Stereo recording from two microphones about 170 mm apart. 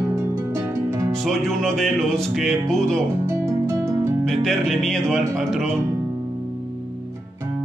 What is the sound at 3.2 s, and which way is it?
Music, 15° right (ahead or behind).